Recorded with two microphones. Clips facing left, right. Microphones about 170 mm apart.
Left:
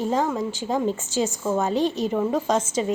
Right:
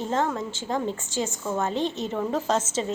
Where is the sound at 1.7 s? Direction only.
20° right (ahead or behind).